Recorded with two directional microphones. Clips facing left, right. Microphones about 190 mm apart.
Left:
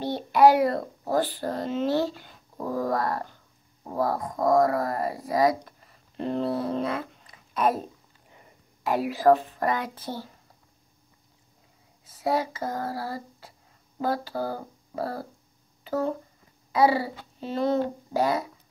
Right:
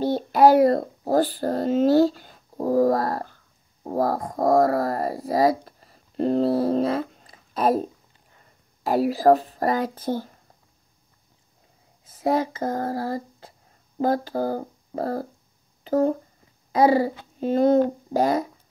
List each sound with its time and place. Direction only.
0.0 s a child's voice: 40° right (ahead or behind)
8.3 s a sound: 15° left (ahead or behind)
8.8 s speech: 40° right (ahead or behind)
12.1 s speech: 45° right (ahead or behind)